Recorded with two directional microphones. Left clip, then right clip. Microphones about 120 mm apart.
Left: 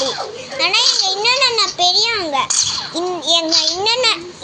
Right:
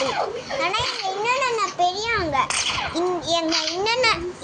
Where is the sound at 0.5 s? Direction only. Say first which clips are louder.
Left 10 dB; 20° left (ahead or behind).